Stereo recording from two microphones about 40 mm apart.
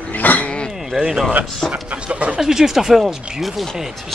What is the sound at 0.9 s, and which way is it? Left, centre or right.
Speech, centre.